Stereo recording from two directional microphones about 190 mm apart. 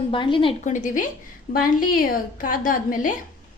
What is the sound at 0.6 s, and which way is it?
A woman's voice, 40° left (ahead or behind).